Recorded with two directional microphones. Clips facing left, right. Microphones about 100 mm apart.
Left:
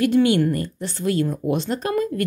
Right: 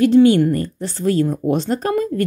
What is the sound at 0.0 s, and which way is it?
Speech, 30° right (ahead or behind).